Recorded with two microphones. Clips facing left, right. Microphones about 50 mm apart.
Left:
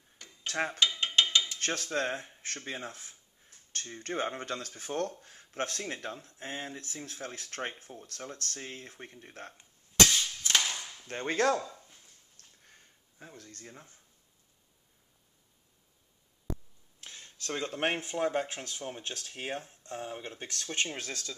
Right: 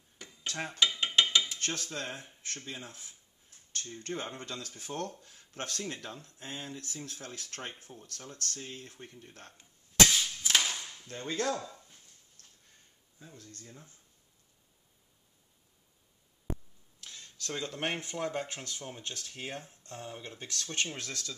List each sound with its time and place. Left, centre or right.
0.5 s dishes: left
0.7 s a sound: centre
1.6 s rub: left
3.7 s speech: left
9.6 s a sound: centre
11.1 s rub: left
13.3 s speech: left
17.0 s speech: left
19.0 s speech: left; by 21.4 s centre